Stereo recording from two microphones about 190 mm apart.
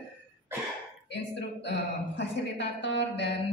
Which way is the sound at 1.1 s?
65° left (ahead or behind).